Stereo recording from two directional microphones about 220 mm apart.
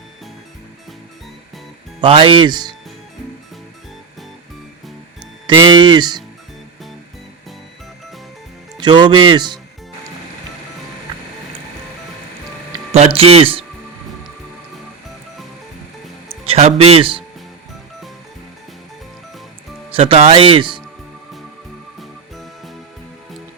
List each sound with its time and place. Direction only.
2.0 s speech: 25° right (ahead or behind)
5.5 s speech: 20° right (ahead or behind)
8.8 s speech: 20° right (ahead or behind)
12.7 s music: 30° right (ahead or behind)
13.1 s speech: 25° right (ahead or behind)
16.5 s speech: 25° right (ahead or behind)
19.9 s speech: 25° right (ahead or behind)
21.9 s music: centre (ahead or behind)